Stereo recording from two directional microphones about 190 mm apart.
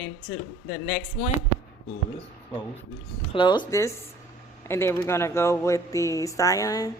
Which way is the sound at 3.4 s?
25° left (ahead or behind).